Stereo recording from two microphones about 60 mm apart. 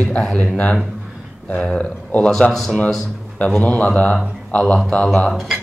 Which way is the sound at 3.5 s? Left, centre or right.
Left.